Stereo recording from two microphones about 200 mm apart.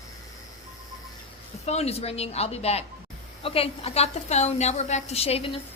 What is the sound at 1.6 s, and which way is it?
A woman's voice, 30° left (ahead or behind).